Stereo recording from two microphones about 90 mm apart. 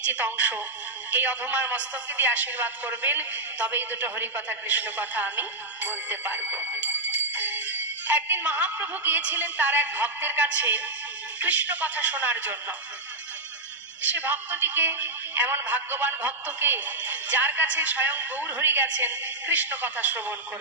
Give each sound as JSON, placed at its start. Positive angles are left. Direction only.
{"t": 0.0, "sound": "a man's voice", "side_deg": -15}
{"t": 14.0, "sound": "a man's voice", "side_deg": -20}